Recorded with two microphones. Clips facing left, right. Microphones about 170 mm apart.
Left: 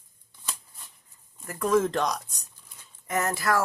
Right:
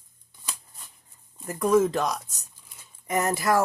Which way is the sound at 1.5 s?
10° right (ahead or behind).